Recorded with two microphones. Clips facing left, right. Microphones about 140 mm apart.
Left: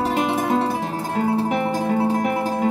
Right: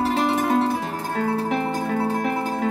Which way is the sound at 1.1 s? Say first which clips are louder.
Left 2 dB; 15° left (ahead or behind).